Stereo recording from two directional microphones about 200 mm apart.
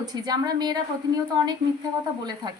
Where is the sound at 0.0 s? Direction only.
20° right (ahead or behind).